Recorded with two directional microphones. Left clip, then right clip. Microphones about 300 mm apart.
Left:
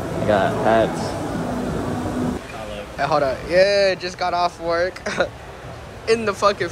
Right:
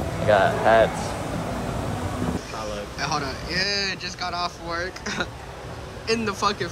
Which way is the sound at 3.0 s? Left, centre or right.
Centre.